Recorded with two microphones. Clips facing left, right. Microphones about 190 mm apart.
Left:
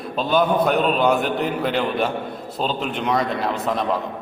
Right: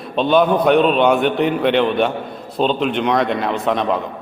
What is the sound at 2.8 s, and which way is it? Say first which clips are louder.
Speech: right 7 dB; 70° right (ahead or behind).